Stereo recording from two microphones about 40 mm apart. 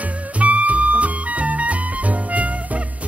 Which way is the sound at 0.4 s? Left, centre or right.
Right.